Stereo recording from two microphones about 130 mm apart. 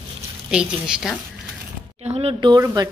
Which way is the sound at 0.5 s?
5° right (ahead or behind).